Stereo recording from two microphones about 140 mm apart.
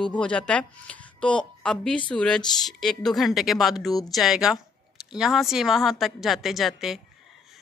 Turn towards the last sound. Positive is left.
turn(degrees=0)  # may be behind; listen again after turning